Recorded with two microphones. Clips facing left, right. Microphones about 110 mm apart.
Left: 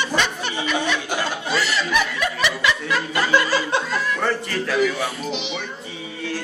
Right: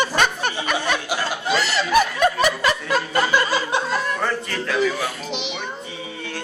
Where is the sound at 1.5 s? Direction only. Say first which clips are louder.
Right 4 dB; 40° right (ahead or behind).